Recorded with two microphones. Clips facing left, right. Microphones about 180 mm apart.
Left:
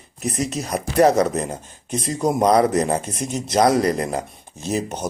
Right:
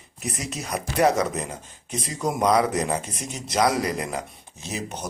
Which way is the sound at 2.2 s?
30° left (ahead or behind).